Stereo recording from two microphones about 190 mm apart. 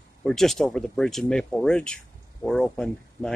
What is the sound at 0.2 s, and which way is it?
Speech, centre (ahead or behind).